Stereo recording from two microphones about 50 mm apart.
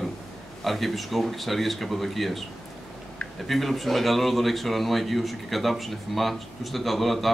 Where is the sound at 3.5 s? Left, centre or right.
Centre.